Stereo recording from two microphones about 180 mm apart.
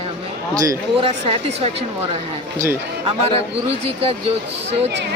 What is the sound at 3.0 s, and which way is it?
Speech, 30° right (ahead or behind).